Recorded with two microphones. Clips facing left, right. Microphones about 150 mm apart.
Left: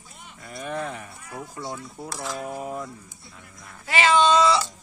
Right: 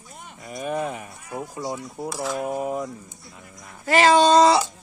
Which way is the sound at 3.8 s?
40° right (ahead or behind).